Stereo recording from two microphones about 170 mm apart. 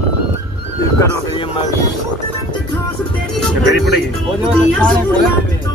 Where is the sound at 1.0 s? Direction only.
25° left (ahead or behind).